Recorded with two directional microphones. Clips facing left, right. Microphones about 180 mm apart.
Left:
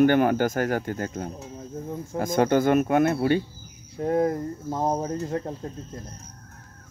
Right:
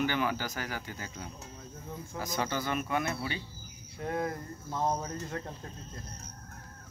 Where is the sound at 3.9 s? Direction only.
40° left (ahead or behind).